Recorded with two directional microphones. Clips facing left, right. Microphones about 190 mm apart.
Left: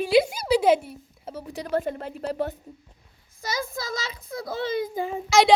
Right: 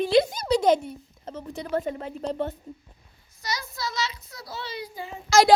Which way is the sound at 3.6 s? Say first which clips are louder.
Even; 50° left (ahead or behind).